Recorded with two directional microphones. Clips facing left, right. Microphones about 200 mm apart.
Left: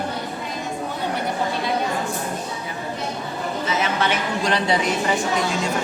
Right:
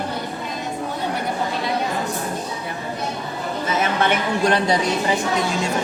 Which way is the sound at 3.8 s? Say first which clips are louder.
Right 4 dB; 55° right (ahead or behind).